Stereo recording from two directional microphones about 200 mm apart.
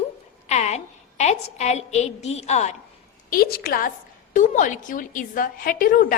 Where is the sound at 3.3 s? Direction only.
45° left (ahead or behind).